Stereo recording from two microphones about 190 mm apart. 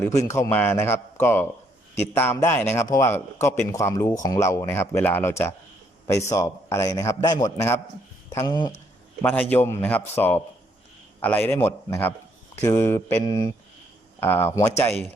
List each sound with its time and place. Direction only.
0.3 s a man's voice: 15° left (ahead or behind)
9.2 s a man's voice: 10° left (ahead or behind)